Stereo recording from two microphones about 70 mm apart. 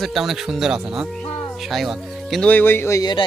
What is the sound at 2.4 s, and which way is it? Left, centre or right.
Speech, left.